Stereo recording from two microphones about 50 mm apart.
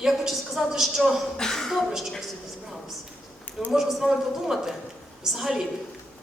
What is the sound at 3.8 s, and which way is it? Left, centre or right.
A woman's voice, centre.